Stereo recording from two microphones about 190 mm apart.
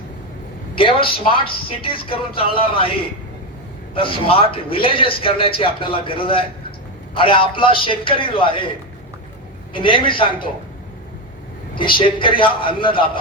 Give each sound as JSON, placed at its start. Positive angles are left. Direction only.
{"t": 0.8, "sound": "a man's voice", "side_deg": 25}
{"t": 3.9, "sound": "a man's voice", "side_deg": 30}
{"t": 9.7, "sound": "a man's voice", "side_deg": 25}
{"t": 11.8, "sound": "a man's voice", "side_deg": 25}